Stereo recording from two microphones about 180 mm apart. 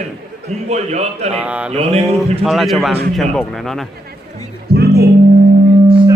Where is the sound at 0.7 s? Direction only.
40° right (ahead or behind).